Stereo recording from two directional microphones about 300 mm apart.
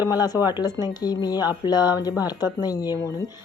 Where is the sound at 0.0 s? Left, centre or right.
Centre.